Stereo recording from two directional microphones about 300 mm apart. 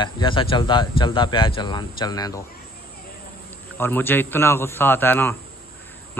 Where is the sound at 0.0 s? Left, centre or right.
Centre.